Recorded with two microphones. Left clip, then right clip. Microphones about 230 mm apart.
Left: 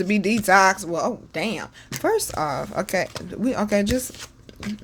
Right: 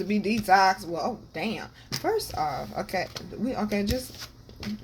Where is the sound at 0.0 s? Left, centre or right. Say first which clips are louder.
Left 6 dB; left.